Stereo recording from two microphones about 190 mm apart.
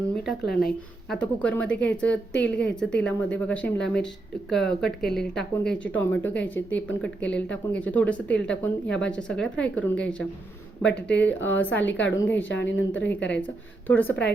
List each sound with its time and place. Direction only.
0.3 s a woman's voice: centre (ahead or behind)
12.5 s a woman's voice: 75° left (ahead or behind)
13.8 s a woman's voice: 10° left (ahead or behind)